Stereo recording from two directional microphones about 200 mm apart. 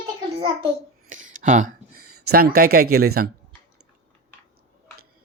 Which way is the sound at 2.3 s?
45° right (ahead or behind).